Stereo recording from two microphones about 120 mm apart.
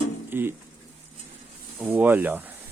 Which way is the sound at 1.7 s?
15° right (ahead or behind).